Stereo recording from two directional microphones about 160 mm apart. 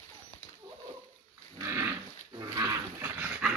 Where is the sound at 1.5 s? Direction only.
15° right (ahead or behind).